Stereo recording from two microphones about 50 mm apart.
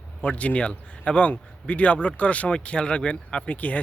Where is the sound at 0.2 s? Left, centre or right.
Left.